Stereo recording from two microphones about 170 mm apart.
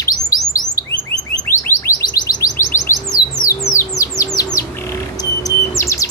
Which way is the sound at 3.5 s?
15° left (ahead or behind).